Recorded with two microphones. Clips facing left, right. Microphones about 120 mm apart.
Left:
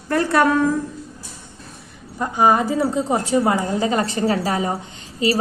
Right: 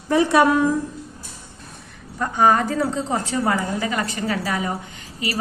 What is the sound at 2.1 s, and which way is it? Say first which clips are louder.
A woman's voice: left 1 dB; 15° left (ahead or behind).